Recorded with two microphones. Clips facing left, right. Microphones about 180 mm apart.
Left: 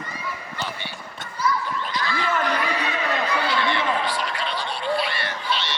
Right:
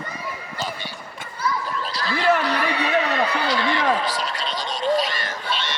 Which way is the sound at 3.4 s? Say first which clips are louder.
Right 2 dB; 40° right (ahead or behind).